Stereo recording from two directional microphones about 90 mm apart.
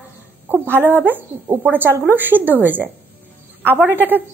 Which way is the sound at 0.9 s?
25° right (ahead or behind).